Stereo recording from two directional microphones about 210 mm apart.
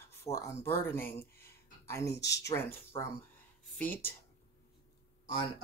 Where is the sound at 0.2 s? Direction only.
10° left (ahead or behind).